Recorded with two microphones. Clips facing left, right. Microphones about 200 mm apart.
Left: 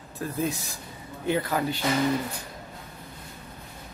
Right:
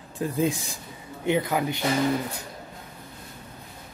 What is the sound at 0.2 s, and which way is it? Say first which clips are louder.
Speech: right 4 dB; 15° right (ahead or behind).